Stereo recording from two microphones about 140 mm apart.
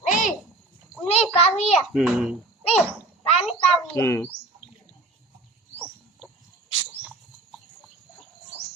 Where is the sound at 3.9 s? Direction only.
20° left (ahead or behind).